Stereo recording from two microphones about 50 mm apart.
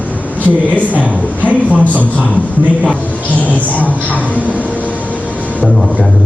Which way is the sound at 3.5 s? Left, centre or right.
Left.